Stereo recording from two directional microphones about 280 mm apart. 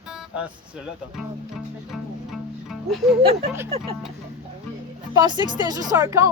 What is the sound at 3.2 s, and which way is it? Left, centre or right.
Speech, right.